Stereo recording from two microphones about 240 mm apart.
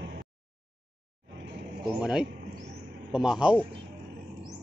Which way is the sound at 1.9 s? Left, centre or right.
Centre.